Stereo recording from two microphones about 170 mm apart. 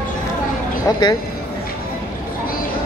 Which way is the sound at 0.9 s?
20° left (ahead or behind).